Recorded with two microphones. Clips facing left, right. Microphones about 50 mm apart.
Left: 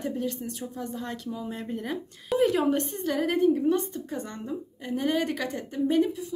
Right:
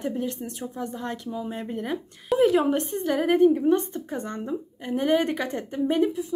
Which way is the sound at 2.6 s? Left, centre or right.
Centre.